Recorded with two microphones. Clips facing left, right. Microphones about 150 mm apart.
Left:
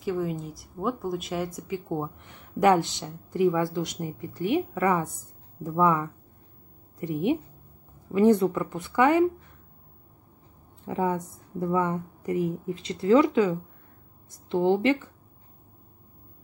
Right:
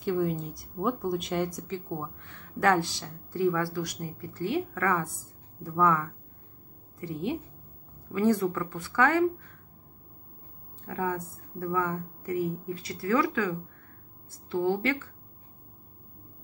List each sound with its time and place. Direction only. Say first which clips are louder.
0.0 s speech: right 1 dB; centre (ahead or behind)
1.9 s speech: left 5 dB; 20° left (ahead or behind)
10.9 s speech: left 4 dB; 20° left (ahead or behind)